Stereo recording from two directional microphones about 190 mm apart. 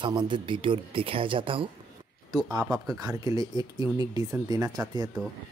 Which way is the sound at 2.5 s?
15° right (ahead or behind).